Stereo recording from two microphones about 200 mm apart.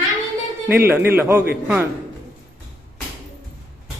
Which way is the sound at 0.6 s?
10° right (ahead or behind).